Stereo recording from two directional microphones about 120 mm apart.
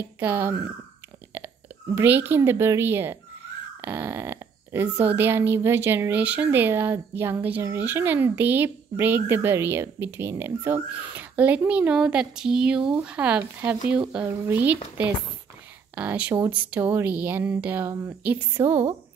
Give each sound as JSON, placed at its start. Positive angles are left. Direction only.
{"t": 0.2, "sound": "speech", "side_deg": -15}
{"t": 2.0, "sound": "speech", "side_deg": -15}
{"t": 15.9, "sound": "speech", "side_deg": -10}